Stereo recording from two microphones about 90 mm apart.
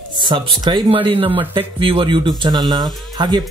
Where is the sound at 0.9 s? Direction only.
90° right.